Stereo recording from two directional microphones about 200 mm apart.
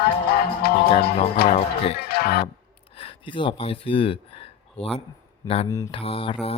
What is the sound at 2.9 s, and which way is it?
Speech, 25° left (ahead or behind).